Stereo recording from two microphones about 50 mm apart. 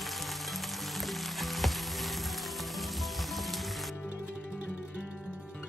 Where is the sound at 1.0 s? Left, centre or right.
Centre.